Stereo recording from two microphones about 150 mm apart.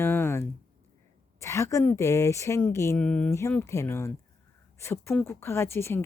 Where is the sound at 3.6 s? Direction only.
20° left (ahead or behind).